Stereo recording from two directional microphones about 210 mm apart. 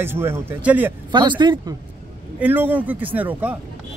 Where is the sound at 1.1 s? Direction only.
20° right (ahead or behind).